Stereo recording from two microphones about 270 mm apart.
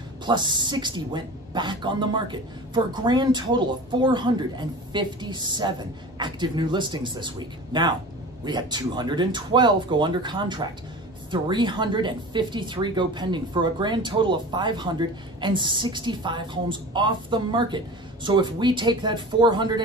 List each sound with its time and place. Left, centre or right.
0.2 s speech: centre